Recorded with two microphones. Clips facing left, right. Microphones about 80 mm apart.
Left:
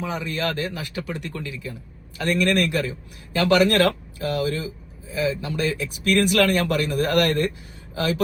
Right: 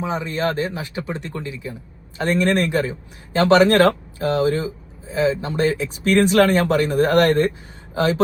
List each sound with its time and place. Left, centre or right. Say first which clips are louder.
0.0 s speech: right 4 dB; right